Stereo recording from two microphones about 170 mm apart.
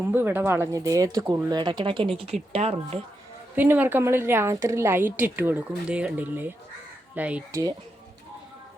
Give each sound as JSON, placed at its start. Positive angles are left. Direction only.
{"t": 0.0, "sound": "speech", "side_deg": -15}
{"t": 3.5, "sound": "a woman's voice", "side_deg": -10}